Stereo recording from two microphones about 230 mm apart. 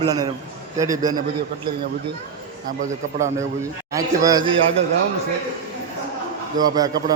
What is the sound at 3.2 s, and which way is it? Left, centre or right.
A man's voice, centre.